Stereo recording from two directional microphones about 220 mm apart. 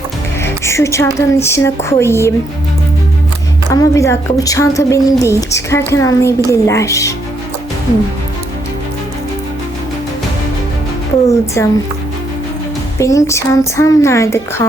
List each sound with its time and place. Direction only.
0.4 s a woman's voice: 10° left (ahead or behind)
3.7 s a woman's voice: 15° left (ahead or behind)
11.3 s a woman's voice: 15° left (ahead or behind)
13.0 s a woman's voice: 15° left (ahead or behind)